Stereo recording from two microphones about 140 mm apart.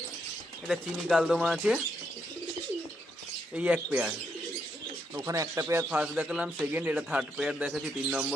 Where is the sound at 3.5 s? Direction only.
10° right (ahead or behind).